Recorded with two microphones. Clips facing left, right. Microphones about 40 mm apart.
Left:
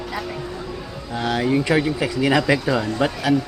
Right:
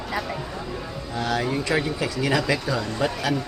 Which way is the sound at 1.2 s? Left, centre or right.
Centre.